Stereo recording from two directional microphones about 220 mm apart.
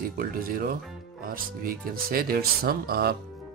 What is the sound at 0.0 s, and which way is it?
Speech, 40° right (ahead or behind).